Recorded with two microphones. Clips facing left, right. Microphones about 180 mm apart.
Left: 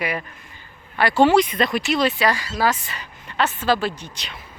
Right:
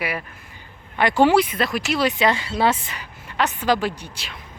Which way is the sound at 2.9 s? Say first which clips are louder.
Even; 15° right (ahead or behind).